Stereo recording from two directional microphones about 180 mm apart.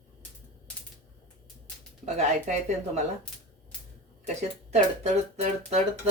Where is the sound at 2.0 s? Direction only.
40° right (ahead or behind).